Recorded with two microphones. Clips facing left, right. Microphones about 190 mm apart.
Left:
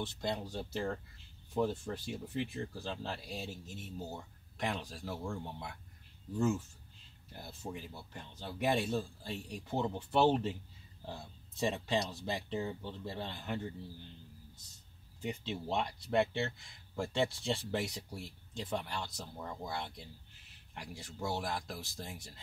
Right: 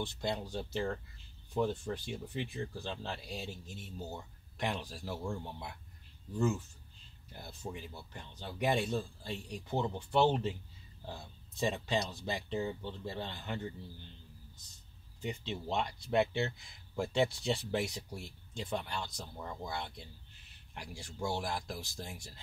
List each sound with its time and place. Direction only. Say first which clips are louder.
0.0 s speech: right 1 dB; centre (ahead or behind)
7.7 s speech: even; centre (ahead or behind)
11.6 s speech: even; centre (ahead or behind)
15.2 s speech: even; 5° left (ahead or behind)